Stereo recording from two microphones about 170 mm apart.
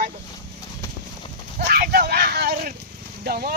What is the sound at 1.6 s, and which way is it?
Speech, 60° right (ahead or behind).